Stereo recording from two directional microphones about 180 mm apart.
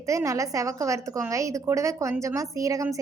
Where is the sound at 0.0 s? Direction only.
15° right (ahead or behind).